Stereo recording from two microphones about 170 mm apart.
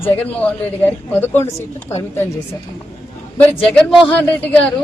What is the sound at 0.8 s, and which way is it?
Speech, 10° left (ahead or behind).